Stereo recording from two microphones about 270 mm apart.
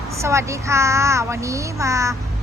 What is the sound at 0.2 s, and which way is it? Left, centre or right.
A woman's voice, centre.